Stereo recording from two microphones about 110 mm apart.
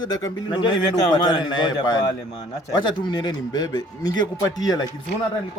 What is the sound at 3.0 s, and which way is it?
A man's voice, 40° left (ahead or behind).